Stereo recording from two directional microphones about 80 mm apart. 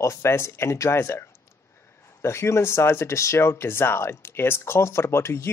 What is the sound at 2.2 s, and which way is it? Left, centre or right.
Speech, left.